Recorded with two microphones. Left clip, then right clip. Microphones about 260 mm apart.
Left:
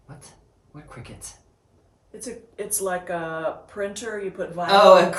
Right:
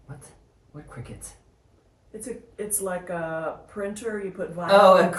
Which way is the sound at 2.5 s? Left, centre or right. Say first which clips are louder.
Left 3 dB; centre.